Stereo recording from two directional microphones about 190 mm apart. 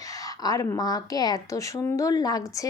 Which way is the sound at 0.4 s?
20° left (ahead or behind).